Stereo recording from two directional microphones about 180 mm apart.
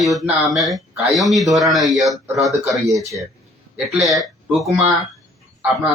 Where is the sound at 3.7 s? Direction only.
5° right (ahead or behind).